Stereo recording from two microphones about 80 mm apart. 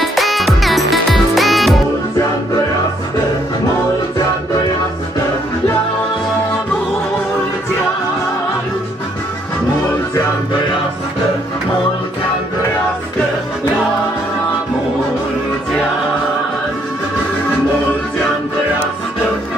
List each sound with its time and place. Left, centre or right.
0.0 s music: centre